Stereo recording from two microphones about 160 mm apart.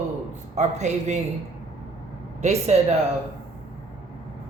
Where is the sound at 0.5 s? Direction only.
45° right (ahead or behind).